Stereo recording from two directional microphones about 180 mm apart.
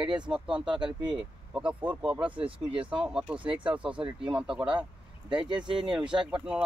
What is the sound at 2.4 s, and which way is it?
Speech, 30° right (ahead or behind).